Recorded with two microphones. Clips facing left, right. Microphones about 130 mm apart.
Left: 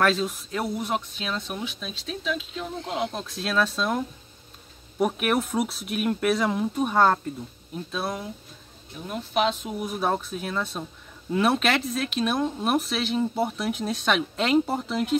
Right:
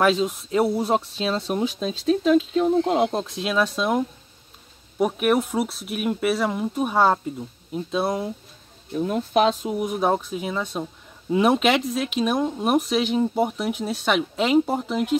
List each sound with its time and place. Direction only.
0.0 s speech: 20° right (ahead or behind); by 3.3 s 35° right (ahead or behind)
3.3 s speech: 15° right (ahead or behind)
4.9 s speech: centre (ahead or behind); by 8.3 s 20° right (ahead or behind)
9.1 s speech: 40° right (ahead or behind)
9.7 s speech: 20° right (ahead or behind)